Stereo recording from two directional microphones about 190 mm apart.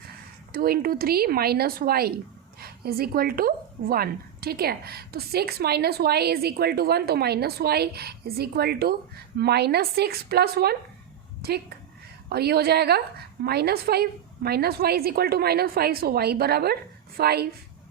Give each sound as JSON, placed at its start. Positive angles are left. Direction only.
{"t": 0.5, "sound": "a woman's voice", "side_deg": -50}